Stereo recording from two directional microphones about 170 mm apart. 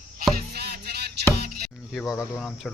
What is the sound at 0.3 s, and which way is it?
Music, 70° right (ahead or behind).